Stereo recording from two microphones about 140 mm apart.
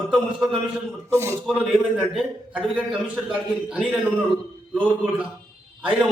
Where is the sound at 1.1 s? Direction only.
20° right (ahead or behind).